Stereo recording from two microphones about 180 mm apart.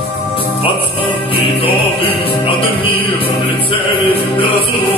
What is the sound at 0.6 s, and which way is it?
Music, 30° left (ahead or behind).